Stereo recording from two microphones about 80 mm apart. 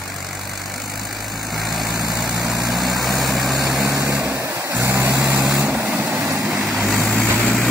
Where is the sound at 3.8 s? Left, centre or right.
Right.